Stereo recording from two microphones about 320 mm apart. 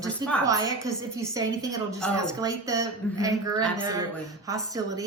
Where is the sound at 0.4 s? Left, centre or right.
Centre.